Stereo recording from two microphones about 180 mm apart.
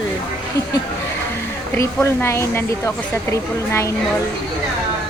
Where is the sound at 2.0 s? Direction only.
15° left (ahead or behind).